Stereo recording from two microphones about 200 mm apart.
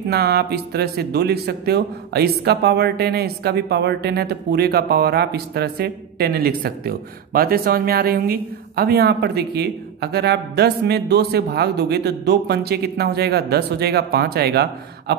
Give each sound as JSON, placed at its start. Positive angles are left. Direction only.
{"t": 0.1, "sound": "a man's voice", "side_deg": -55}